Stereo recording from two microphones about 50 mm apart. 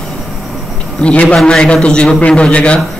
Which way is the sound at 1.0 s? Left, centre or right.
Left.